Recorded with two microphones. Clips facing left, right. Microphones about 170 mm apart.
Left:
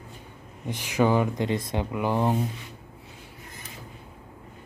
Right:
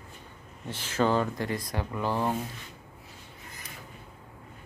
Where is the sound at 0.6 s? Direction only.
15° left (ahead or behind).